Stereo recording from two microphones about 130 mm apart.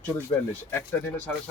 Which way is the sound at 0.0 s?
15° left (ahead or behind).